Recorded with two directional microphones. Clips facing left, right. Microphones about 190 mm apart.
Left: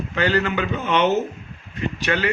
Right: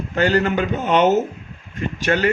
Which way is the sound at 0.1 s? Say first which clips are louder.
Right 4 dB; 45° right (ahead or behind).